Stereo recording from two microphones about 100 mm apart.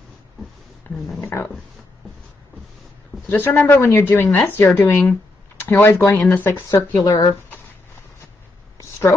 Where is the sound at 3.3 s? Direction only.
20° left (ahead or behind).